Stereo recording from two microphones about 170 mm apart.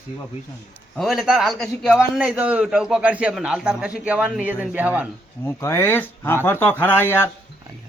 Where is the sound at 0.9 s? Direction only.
Centre (ahead or behind).